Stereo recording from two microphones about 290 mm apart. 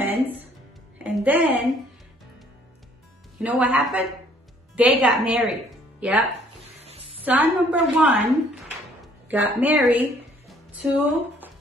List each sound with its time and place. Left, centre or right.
0.0 s music: centre
0.9 s a woman's voice: centre
3.3 s a woman's voice: centre
6.8 s a sound: right
7.2 s a woman's voice: centre
9.3 s a woman's voice: centre